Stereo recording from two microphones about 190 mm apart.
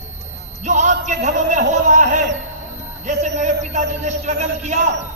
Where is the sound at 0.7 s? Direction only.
40° right (ahead or behind).